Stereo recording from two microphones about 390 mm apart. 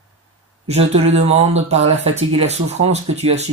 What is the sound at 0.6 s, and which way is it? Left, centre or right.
Speech, centre.